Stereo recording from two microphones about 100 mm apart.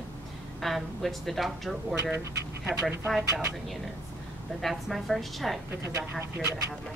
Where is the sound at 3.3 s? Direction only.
30° right (ahead or behind).